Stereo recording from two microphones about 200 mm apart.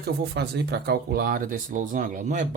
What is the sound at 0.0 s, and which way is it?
Speech, 55° right (ahead or behind).